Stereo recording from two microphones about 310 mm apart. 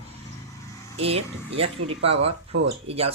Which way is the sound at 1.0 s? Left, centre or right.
Centre.